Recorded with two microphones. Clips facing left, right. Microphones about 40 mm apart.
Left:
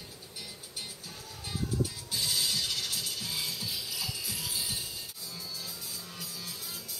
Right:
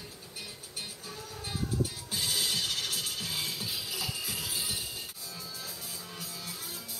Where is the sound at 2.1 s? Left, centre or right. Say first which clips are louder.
Even; right.